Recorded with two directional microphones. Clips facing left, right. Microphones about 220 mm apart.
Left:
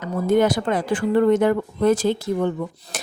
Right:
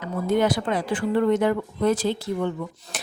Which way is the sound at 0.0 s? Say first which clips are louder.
Left 4 dB; 45° left (ahead or behind).